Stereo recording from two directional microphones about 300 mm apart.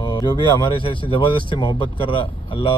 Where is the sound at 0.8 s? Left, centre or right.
Centre.